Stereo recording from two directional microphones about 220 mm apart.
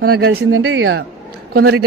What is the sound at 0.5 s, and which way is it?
Speech, 60° right (ahead or behind).